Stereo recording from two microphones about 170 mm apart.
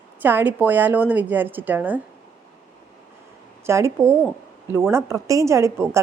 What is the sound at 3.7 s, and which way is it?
A woman's voice, 15° right (ahead or behind).